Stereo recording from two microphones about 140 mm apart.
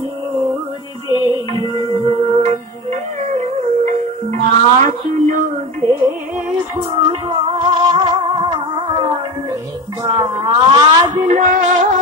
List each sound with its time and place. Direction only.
1.0 s music: 30° left (ahead or behind)
1.8 s music: 45° right (ahead or behind)
4.8 s a sound: 70° right (ahead or behind)
6.8 s music: 35° right (ahead or behind)
10.0 s a sound: 40° right (ahead or behind)
11.2 s music: 65° right (ahead or behind)